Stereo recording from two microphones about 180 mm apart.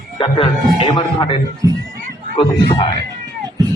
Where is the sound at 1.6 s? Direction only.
20° right (ahead or behind).